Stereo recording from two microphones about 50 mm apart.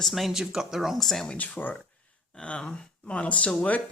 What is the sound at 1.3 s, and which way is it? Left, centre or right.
Speech, left.